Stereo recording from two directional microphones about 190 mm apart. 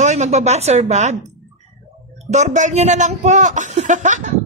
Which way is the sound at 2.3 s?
40° right (ahead or behind).